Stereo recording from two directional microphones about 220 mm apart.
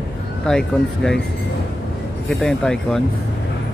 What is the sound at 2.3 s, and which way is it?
Speech, centre (ahead or behind).